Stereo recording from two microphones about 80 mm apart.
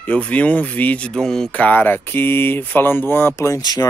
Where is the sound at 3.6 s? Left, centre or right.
Left.